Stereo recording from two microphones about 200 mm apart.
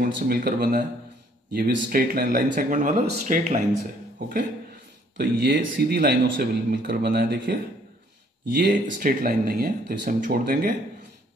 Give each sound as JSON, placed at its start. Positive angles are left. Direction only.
{"t": 0.0, "sound": "speech", "side_deg": -50}
{"t": 5.1, "sound": "speech", "side_deg": -55}
{"t": 8.5, "sound": "speech", "side_deg": -55}